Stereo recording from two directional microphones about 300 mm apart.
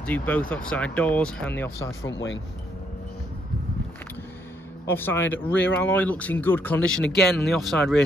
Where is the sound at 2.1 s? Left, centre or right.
Left.